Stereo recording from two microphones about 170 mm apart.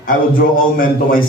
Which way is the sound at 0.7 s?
55° left (ahead or behind).